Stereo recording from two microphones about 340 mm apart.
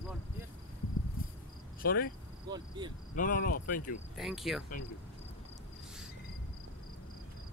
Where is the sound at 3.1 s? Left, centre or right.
Left.